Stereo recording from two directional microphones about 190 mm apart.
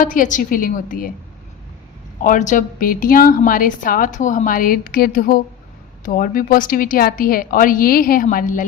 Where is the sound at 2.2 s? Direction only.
40° left (ahead or behind).